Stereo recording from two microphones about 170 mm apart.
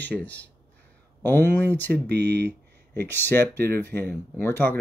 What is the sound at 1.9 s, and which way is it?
Speech, 80° right.